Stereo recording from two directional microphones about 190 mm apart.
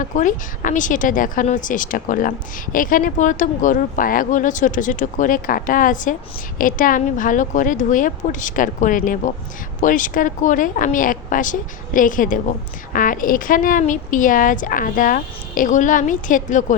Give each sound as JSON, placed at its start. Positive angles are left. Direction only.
{"t": 0.0, "sound": "a woman's voice", "side_deg": 45}